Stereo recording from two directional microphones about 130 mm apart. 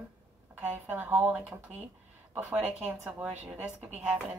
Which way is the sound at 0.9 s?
15° right (ahead or behind).